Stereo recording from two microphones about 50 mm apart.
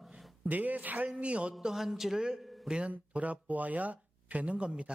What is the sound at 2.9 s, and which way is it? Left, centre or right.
Speech, right.